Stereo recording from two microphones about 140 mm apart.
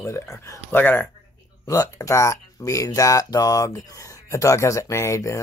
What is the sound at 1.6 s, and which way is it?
Speech, 25° left (ahead or behind).